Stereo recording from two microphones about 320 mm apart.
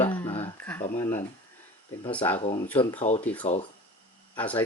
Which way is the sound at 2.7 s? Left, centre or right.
Centre.